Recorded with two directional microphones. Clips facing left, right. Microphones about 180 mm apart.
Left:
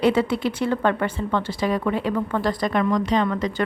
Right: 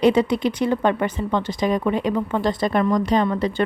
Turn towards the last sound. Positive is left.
turn(degrees=-25)  # may be behind; listen again after turning